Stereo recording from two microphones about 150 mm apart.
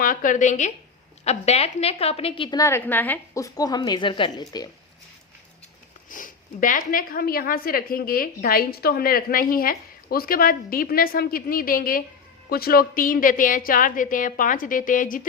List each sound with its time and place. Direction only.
0.0 s a woman's voice: 60° left (ahead or behind); by 2.6 s 35° left (ahead or behind)
2.6 s a woman's voice: 20° left (ahead or behind)
6.1 s speech: 65° left (ahead or behind)
12.5 s a woman's voice: 85° left; by 15.3 s 65° left (ahead or behind)